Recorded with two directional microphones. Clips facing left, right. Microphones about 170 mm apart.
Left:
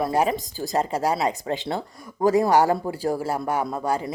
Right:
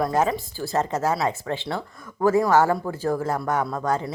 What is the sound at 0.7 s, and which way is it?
Speech, 15° left (ahead or behind).